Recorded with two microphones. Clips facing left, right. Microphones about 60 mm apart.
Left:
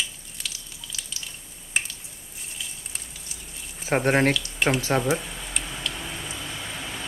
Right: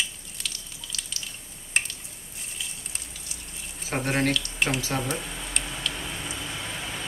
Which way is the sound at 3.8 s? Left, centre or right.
Left.